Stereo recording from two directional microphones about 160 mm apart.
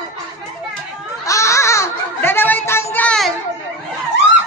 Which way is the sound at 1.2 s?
20° left (ahead or behind).